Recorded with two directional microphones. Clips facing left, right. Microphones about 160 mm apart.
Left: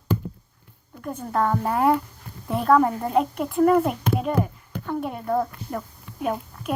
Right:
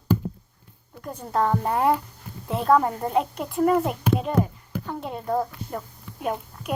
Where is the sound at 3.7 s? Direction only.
Centre (ahead or behind).